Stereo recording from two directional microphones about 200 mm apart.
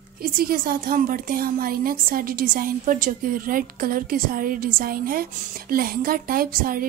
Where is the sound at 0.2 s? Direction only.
45° right (ahead or behind).